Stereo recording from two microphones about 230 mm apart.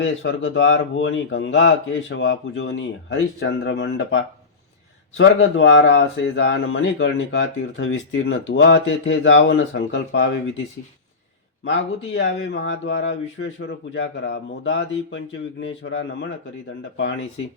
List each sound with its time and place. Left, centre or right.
0.0 s speech: left
12.1 s a man's voice: left